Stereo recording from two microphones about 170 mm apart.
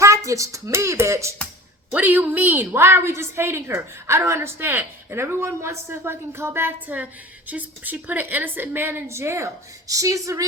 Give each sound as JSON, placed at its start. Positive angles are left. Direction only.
{"t": 0.3, "sound": "a woman's voice", "side_deg": -20}